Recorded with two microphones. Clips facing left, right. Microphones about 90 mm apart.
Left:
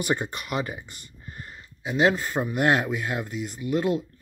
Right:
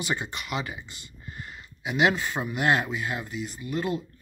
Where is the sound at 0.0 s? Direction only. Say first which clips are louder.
Left 4 dB; 50° left (ahead or behind).